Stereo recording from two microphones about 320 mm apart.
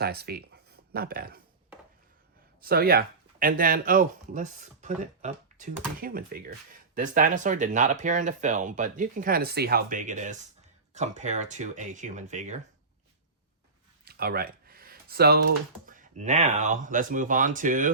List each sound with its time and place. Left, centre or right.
0.0 s speech: right
2.6 s speech: right
14.0 s speech: right